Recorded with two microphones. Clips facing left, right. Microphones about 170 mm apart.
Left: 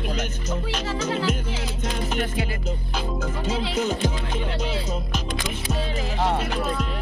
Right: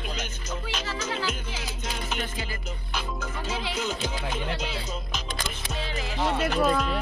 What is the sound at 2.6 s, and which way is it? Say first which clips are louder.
Music: left 6 dB; 35° left (ahead or behind).